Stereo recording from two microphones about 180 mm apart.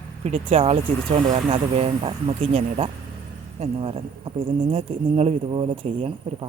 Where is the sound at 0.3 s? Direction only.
35° right (ahead or behind).